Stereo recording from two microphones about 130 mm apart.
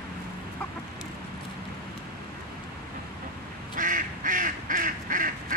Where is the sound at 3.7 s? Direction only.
90° right.